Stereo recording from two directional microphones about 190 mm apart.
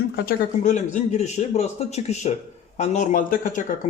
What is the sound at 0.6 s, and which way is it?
Speech, 40° left (ahead or behind).